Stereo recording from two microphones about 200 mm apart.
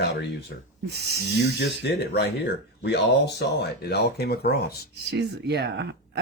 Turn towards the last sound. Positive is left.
turn(degrees=-55)  # may be behind; listen again after turning